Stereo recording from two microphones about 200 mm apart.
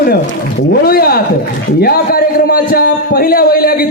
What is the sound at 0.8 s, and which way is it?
A man's voice, 50° left (ahead or behind).